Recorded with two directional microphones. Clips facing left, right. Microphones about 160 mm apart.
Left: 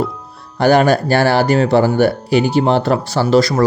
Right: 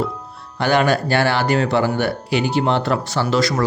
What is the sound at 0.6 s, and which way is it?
Speech, 40° left (ahead or behind).